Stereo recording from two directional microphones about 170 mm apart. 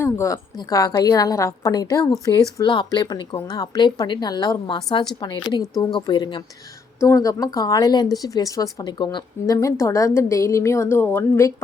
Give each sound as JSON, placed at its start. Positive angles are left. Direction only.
{"t": 0.0, "sound": "speech", "side_deg": 15}